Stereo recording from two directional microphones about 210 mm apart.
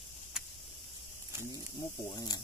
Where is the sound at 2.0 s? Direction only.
20° left (ahead or behind).